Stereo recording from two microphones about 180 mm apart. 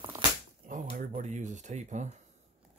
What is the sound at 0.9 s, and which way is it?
Speech, 40° right (ahead or behind).